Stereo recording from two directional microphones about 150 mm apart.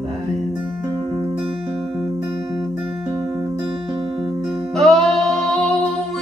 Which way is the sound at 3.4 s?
30° right (ahead or behind).